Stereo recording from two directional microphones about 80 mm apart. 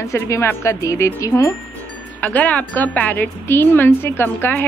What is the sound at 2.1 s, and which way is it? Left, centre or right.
A woman's voice, left.